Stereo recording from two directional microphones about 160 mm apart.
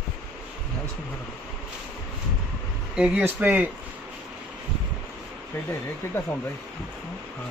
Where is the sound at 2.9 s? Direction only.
5° right (ahead or behind).